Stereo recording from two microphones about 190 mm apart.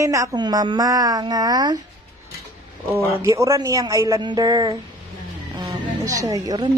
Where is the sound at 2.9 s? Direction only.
15° right (ahead or behind).